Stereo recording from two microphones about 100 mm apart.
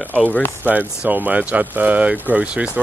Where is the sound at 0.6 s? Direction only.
15° right (ahead or behind).